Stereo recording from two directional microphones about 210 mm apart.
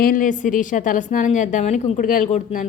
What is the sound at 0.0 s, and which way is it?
A woman's voice, 40° left (ahead or behind).